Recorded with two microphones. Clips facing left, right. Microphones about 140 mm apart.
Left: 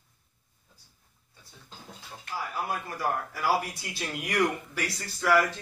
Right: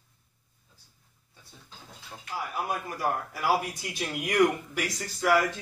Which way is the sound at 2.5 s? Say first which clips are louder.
Right 1 dB; 15° right (ahead or behind).